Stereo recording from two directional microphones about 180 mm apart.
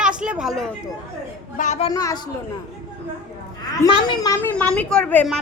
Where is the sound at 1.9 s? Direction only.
20° left (ahead or behind).